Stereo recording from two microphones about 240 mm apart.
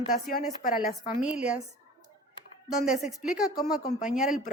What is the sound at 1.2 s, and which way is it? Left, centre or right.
Speech, centre.